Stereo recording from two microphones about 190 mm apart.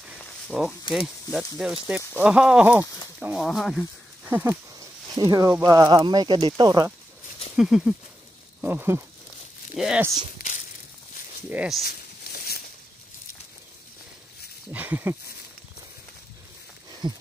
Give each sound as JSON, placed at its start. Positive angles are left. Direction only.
{"t": 0.0, "sound": "a sound", "side_deg": -5}
{"t": 0.9, "sound": "speech", "side_deg": 0}
{"t": 4.3, "sound": "speech", "side_deg": -10}
{"t": 7.5, "sound": "speech", "side_deg": -5}
{"t": 8.5, "sound": "a sound", "side_deg": -10}
{"t": 9.8, "sound": "speech", "side_deg": -5}
{"t": 11.4, "sound": "speech", "side_deg": -5}
{"t": 11.8, "sound": "a sound", "side_deg": 55}
{"t": 14.7, "sound": "speech", "side_deg": -10}
{"t": 17.0, "sound": "speech", "side_deg": -25}